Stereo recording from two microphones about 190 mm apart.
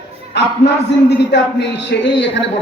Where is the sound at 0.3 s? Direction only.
65° left (ahead or behind).